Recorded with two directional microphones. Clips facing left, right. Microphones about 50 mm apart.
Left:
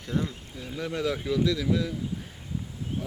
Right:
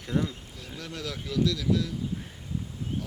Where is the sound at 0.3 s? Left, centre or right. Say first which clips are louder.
Left 3 dB; left.